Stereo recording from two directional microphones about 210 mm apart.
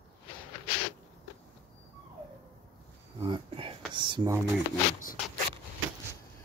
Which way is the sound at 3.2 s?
25° right (ahead or behind).